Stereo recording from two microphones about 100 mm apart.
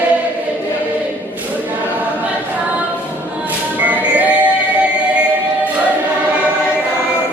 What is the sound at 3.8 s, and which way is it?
Music, 15° right (ahead or behind).